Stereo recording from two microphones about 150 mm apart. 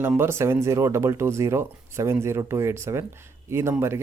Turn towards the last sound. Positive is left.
turn(degrees=-15)  # may be behind; listen again after turning